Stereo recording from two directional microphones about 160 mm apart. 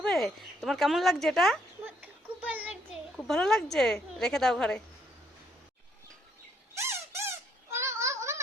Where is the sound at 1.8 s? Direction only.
10° right (ahead or behind).